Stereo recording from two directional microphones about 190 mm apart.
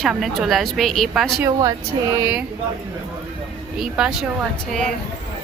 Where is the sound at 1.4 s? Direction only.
20° right (ahead or behind).